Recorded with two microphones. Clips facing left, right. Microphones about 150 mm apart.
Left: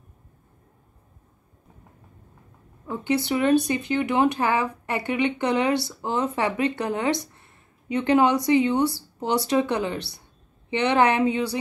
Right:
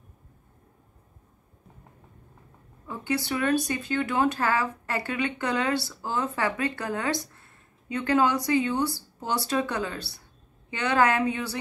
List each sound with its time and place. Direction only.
2.9 s speech: 20° left (ahead or behind)